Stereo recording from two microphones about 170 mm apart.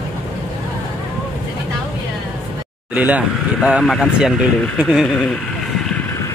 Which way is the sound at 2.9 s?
10° right (ahead or behind).